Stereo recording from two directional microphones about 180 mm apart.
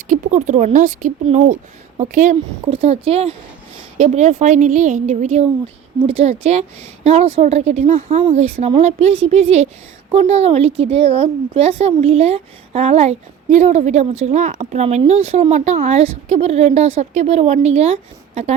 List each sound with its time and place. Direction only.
0.1 s a woman's voice: 45° right (ahead or behind)